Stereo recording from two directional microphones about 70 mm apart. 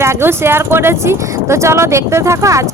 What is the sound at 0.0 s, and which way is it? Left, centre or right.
Speech, right.